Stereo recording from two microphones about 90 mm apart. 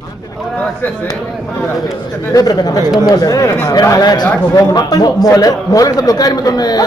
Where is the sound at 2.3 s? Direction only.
45° left (ahead or behind).